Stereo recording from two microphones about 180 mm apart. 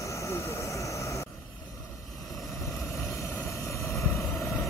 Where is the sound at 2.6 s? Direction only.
15° left (ahead or behind).